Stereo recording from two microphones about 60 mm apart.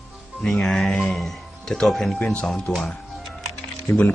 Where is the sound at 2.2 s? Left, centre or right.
Centre.